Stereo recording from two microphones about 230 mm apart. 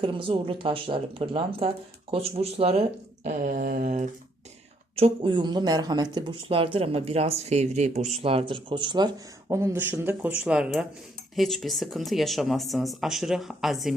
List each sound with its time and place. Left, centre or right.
0.0 s speech: right; by 13.9 s centre